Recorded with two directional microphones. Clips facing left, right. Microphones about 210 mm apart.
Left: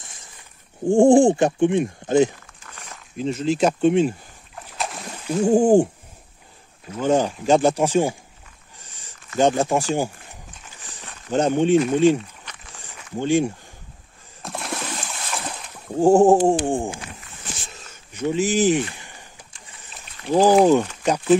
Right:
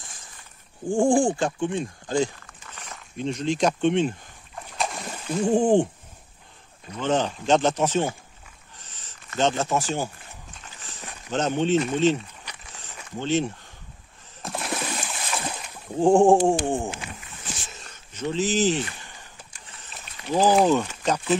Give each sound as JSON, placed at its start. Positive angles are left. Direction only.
{"t": 0.8, "sound": "speech", "side_deg": 25}
{"t": 2.9, "sound": "rowboat", "side_deg": 0}
{"t": 5.2, "sound": "speech", "side_deg": 10}
{"t": 6.9, "sound": "speech", "side_deg": 10}
{"t": 8.7, "sound": "a sound", "side_deg": 10}
{"t": 9.4, "sound": "speech", "side_deg": 15}
{"t": 10.8, "sound": "walk", "side_deg": 15}
{"t": 11.3, "sound": "speech", "side_deg": 10}
{"t": 13.2, "sound": "speech", "side_deg": 10}
{"t": 14.4, "sound": "splash", "side_deg": 0}
{"t": 16.0, "sound": "speech", "side_deg": 5}
{"t": 17.9, "sound": "a sound", "side_deg": 10}
{"t": 20.3, "sound": "speech", "side_deg": 15}